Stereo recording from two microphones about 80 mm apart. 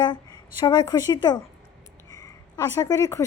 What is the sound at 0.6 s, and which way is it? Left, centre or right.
Speech, left.